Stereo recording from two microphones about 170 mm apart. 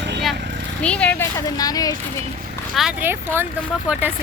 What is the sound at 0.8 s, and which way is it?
Speech, 5° left (ahead or behind).